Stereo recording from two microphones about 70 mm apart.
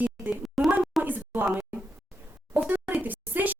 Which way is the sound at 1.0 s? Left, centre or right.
Right.